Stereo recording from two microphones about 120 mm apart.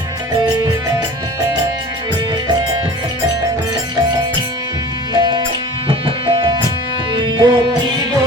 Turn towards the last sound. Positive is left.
turn(degrees=-40)  # may be behind; listen again after turning